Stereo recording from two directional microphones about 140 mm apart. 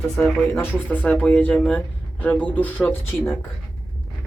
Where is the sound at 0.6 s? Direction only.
15° left (ahead or behind).